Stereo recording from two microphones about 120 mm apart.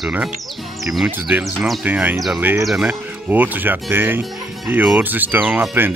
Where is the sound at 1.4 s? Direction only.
Centre (ahead or behind).